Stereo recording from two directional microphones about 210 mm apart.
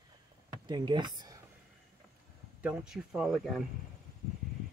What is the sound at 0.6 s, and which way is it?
Speech, 20° right (ahead or behind).